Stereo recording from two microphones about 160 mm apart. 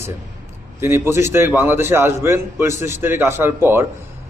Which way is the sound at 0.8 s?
15° right (ahead or behind).